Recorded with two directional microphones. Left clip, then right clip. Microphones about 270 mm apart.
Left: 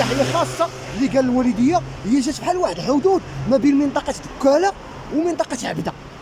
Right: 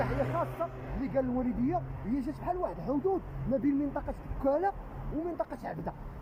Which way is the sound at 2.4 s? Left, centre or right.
Centre.